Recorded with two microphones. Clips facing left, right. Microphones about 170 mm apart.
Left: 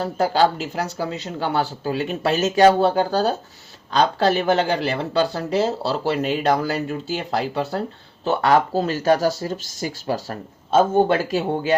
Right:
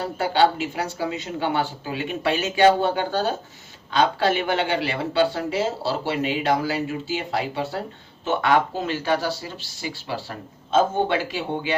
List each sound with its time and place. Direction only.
0.0 s speech: 40° left (ahead or behind)